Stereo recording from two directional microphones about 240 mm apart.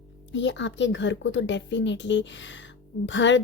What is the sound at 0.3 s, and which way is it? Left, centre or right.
A woman's voice, left.